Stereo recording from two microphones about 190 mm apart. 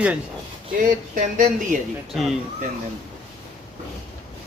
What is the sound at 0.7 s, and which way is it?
Speech, 45° right (ahead or behind).